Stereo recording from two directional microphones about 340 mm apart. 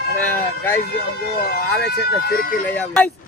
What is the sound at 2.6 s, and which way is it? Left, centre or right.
Speech, centre.